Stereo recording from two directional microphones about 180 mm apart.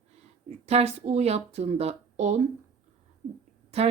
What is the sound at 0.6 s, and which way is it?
Speech, 35° right (ahead or behind).